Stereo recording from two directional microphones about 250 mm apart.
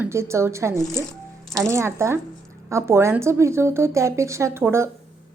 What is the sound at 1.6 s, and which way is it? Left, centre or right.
A woman's voice, centre.